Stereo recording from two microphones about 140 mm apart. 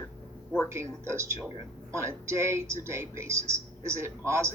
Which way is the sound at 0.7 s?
20° right (ahead or behind).